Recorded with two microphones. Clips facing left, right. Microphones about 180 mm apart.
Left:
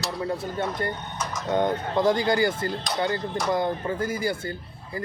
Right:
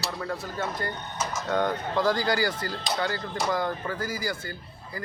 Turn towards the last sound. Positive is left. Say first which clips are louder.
# left 5 dB
turn(degrees=25)  # may be behind; listen again after turning